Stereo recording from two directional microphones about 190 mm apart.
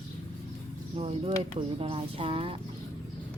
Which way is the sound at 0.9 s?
30° right (ahead or behind).